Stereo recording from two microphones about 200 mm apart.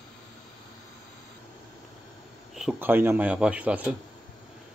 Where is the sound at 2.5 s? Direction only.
5° right (ahead or behind).